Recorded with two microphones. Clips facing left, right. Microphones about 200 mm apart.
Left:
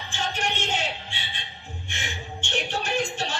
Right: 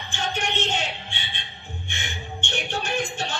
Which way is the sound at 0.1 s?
5° left (ahead or behind).